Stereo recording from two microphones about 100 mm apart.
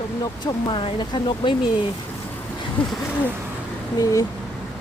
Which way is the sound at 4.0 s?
35° left (ahead or behind).